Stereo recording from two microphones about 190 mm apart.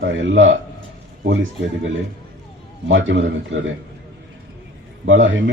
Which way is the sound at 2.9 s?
80° right.